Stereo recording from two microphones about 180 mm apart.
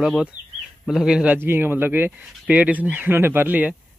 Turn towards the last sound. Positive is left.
turn(degrees=-10)  # may be behind; listen again after turning